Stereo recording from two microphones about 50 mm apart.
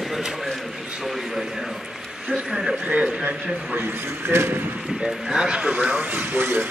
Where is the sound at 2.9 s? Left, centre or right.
Right.